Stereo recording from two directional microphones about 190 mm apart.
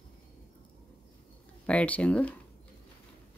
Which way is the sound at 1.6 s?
5° left (ahead or behind).